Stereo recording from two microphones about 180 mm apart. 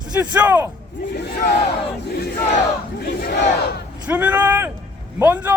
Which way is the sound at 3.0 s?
60° left (ahead or behind).